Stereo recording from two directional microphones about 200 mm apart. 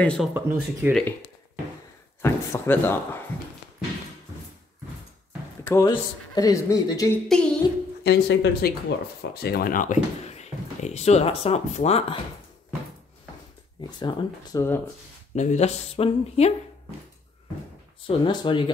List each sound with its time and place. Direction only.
0.0 s a sound: 5° left (ahead or behind)
0.3 s speech: 10° right (ahead or behind)
2.2 s speech: 10° left (ahead or behind)
5.6 s speech: 15° left (ahead or behind)
7.2 s a sound: 5° left (ahead or behind)
8.0 s speech: 55° left (ahead or behind); by 12.2 s 30° left (ahead or behind)
13.7 s speech: 20° left (ahead or behind)
15.3 s speech: 35° left (ahead or behind)
18.0 s speech: 25° left (ahead or behind)